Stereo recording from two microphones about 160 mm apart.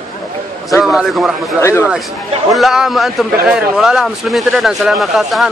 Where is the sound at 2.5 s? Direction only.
Centre (ahead or behind).